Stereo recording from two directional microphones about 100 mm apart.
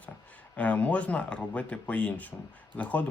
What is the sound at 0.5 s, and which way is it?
Speech, 15° left (ahead or behind).